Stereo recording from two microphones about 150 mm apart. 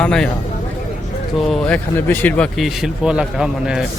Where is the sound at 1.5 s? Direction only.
5° left (ahead or behind).